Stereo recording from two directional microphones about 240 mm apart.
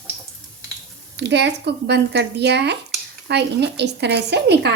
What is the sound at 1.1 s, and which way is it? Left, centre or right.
Speech, right.